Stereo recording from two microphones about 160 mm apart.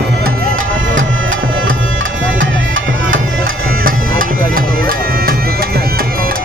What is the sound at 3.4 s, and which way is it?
Music, 65° right (ahead or behind).